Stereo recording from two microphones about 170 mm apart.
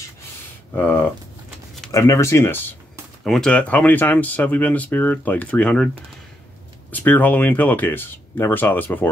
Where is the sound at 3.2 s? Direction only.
5° left (ahead or behind).